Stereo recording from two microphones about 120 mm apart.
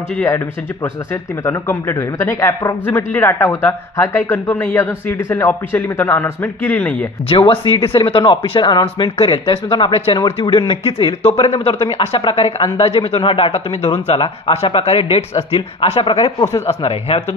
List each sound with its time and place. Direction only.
0.8 s speech: 20° left (ahead or behind)
7.2 s speech: 50° left (ahead or behind)
8.0 s speech: 40° left (ahead or behind)
10.7 s speech: 55° left (ahead or behind)
16.6 s speech: 55° left (ahead or behind)